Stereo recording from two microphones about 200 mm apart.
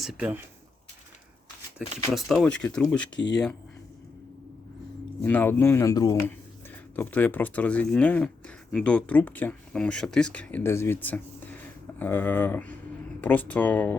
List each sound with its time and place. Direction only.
0.0 s speech: 5° right (ahead or behind)
2.1 s speech: centre (ahead or behind)
3.2 s speech: 60° left (ahead or behind)
5.2 s speech: 10° left (ahead or behind)